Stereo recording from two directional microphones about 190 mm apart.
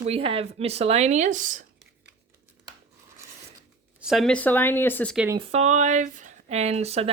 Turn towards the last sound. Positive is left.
turn(degrees=-35)  # may be behind; listen again after turning